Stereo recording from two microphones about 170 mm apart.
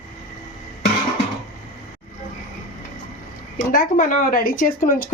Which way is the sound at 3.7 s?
55° left (ahead or behind).